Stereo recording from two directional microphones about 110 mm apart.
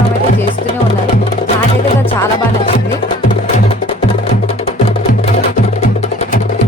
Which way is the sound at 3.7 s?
65° left (ahead or behind).